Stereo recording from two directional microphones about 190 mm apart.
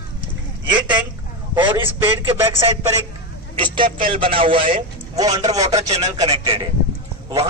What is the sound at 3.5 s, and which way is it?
A man's voice, 25° right (ahead or behind).